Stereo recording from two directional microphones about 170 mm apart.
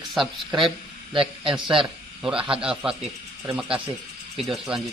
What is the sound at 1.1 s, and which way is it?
Speech, 30° right (ahead or behind).